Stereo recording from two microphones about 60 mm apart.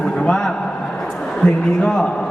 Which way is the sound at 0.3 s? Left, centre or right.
Centre.